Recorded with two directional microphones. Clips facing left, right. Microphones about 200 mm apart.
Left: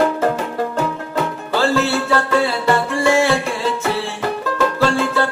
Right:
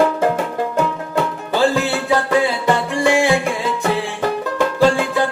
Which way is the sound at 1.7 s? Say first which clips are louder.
Left 1 dB; 15° right (ahead or behind).